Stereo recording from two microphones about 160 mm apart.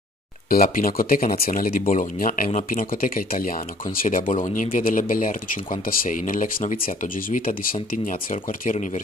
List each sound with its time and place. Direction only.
0.5 s speech: 60° left (ahead or behind)